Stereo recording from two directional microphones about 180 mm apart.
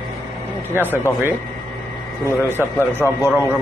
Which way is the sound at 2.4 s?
15° left (ahead or behind).